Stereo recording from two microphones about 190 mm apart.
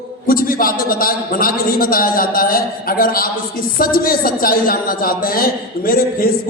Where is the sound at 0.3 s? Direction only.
50° left (ahead or behind).